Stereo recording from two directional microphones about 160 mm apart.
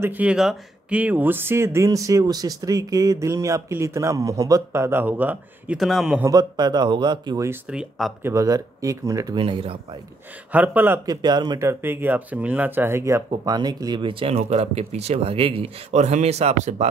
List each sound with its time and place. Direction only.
0.0 s speech: 10° right (ahead or behind)
6.2 s speech: 25° right (ahead or behind)
7.7 s speech: 5° right (ahead or behind)
8.3 s speech: 20° right (ahead or behind)
9.4 s speech: 35° right (ahead or behind)
10.5 s speech: 10° right (ahead or behind)
11.1 s speech: 25° right (ahead or behind); by 16.9 s 45° right (ahead or behind)